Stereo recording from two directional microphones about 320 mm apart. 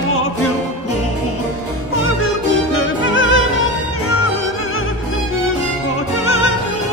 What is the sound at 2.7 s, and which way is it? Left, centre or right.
Music, left.